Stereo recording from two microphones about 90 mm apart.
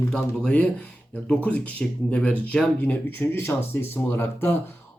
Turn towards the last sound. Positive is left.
turn(degrees=25)  # may be behind; listen again after turning